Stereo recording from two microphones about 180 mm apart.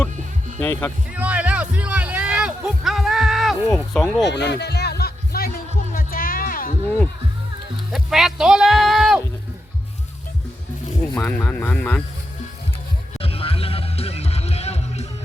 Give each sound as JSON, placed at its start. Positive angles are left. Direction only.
{"t": 0.6, "sound": "speech", "side_deg": 10}
{"t": 1.1, "sound": "music", "side_deg": -10}
{"t": 4.2, "sound": "music", "side_deg": 75}
{"t": 7.9, "sound": "speech", "side_deg": 0}
{"t": 11.1, "sound": "speech", "side_deg": 10}
{"t": 13.1, "sound": "music", "side_deg": 30}